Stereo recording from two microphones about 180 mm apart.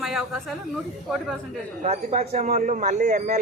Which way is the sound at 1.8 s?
40° right (ahead or behind).